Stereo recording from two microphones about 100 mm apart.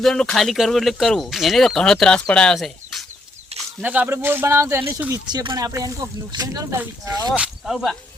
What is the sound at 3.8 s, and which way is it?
Speech, 15° right (ahead or behind).